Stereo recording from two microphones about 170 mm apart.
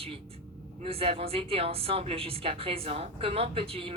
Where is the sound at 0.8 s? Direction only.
35° right (ahead or behind).